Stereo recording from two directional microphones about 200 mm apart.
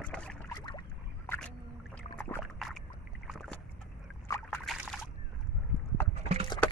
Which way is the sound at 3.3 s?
Centre (ahead or behind).